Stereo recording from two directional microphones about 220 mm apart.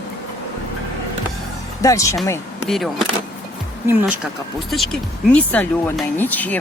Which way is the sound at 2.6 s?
Centre (ahead or behind).